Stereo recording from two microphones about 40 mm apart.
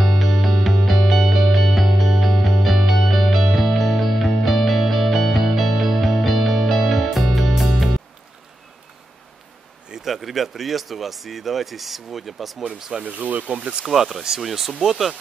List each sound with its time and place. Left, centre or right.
0.0 s music: centre
10.0 s speech: centre
13.0 s speech: right
13.8 s speech: centre